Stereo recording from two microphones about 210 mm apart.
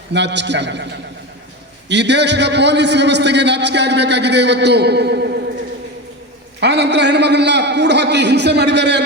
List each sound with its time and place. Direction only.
0.1 s a man's voice: 55° right (ahead or behind)
1.9 s a man's voice: 55° right (ahead or behind)
6.6 s a man's voice: 55° right (ahead or behind)